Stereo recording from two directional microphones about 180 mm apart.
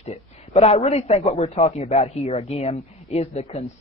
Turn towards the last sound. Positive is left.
turn(degrees=35)  # may be behind; listen again after turning